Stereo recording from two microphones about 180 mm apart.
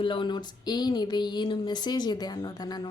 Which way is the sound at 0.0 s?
30° left (ahead or behind).